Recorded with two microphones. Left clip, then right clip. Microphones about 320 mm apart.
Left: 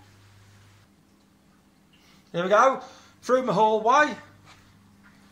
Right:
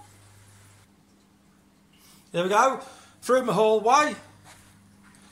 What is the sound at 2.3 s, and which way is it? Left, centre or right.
Speech, centre.